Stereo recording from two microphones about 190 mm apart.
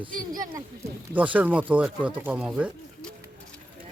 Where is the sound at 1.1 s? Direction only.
10° right (ahead or behind).